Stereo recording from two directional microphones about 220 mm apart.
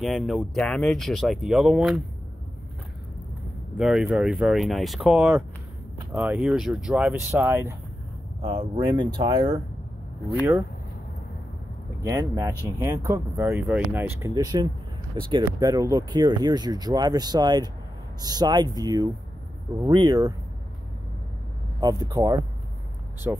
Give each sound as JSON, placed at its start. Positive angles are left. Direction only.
{"t": 0.0, "sound": "speech", "side_deg": 0}
{"t": 3.7, "sound": "speech", "side_deg": -5}
{"t": 8.4, "sound": "speech", "side_deg": -20}
{"t": 12.0, "sound": "speech", "side_deg": -15}
{"t": 21.7, "sound": "speech", "side_deg": -20}